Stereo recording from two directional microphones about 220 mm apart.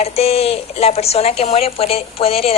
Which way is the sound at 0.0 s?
25° left (ahead or behind).